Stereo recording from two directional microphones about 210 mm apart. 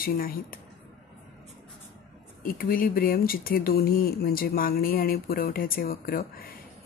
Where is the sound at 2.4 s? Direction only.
45° left (ahead or behind).